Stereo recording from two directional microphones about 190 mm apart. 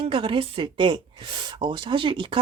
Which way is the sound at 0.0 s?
25° right (ahead or behind).